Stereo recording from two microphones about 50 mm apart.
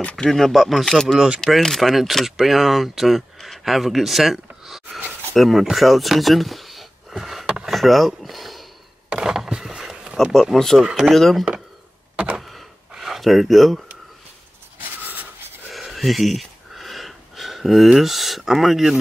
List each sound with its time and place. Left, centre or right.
0.0 s speech: centre
0.3 s speech: centre
1.1 s speech: centre
1.6 s speech: centre
7.6 s a sound: centre
10.4 s speech: centre
10.8 s speech: centre
11.1 s speech: centre
12.4 s gasp: centre
12.9 s speech: centre
14.8 s writing: right
15.7 s gasp: centre
17.9 s speech: centre